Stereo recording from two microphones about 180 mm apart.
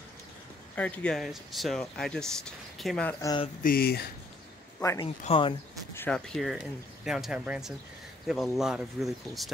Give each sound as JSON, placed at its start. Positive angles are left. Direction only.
{"t": 0.7, "sound": "speech", "side_deg": 10}
{"t": 3.2, "sound": "speech", "side_deg": 20}
{"t": 3.6, "sound": "speech", "side_deg": 60}
{"t": 5.0, "sound": "speech", "side_deg": 30}
{"t": 5.9, "sound": "speech", "side_deg": 5}